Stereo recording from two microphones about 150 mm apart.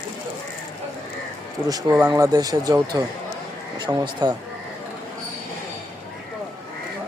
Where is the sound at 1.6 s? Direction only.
25° right (ahead or behind).